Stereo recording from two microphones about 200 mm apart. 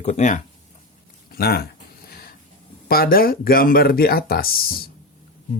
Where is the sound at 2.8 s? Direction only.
50° left (ahead or behind).